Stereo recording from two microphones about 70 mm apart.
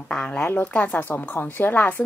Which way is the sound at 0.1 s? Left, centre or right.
Centre.